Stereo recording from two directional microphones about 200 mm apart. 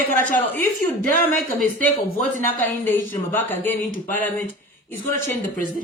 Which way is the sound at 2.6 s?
10° left (ahead or behind).